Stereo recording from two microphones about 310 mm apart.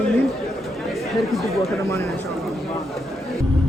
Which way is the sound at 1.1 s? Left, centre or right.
Centre.